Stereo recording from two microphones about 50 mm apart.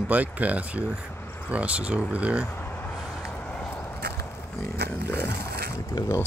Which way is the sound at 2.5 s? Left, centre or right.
Left.